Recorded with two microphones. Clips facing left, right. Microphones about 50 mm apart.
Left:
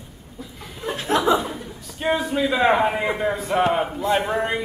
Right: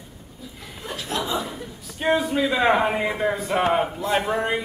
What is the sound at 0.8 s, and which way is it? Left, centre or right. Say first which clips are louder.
Chuckle: left 5 dB; left.